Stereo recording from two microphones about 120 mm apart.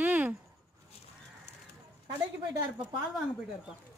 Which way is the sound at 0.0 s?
15° right (ahead or behind).